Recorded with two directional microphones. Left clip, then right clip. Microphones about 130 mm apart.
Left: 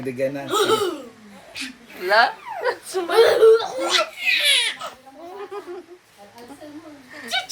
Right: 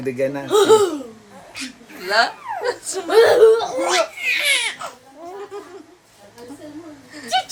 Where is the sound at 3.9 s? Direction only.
5° right (ahead or behind).